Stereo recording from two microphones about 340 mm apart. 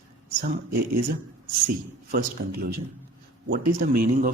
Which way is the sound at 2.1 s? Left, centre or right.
Right.